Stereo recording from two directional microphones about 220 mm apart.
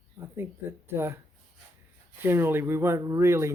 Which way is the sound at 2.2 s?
10° right (ahead or behind).